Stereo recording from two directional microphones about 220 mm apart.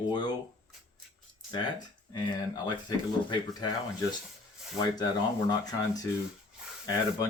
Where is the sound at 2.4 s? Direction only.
20° left (ahead or behind).